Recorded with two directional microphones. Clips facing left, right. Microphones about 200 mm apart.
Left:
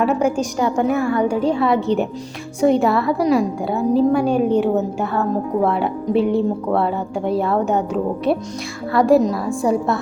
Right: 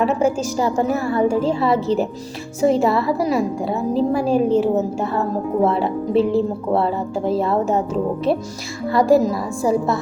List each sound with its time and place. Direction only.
0.0 s a woman's voice: centre (ahead or behind)
0.8 s a woman's voice: 35° right (ahead or behind)
1.2 s a woman's voice: centre (ahead or behind)
8.9 s a woman's voice: centre (ahead or behind)